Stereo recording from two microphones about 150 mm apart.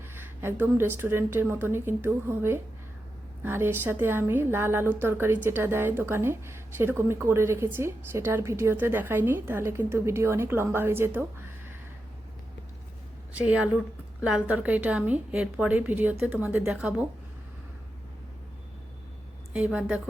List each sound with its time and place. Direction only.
0.1 s a woman's voice: 15° right (ahead or behind)
13.4 s a woman's voice: 10° right (ahead or behind)
19.5 s a woman's voice: 10° right (ahead or behind)